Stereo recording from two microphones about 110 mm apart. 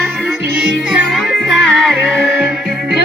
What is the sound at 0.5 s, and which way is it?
Music, 10° right (ahead or behind).